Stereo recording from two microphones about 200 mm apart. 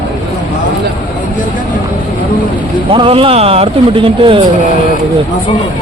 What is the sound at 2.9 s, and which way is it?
Speech, 25° right (ahead or behind).